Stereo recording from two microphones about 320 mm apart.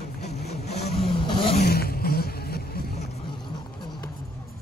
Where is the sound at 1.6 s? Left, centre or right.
Left.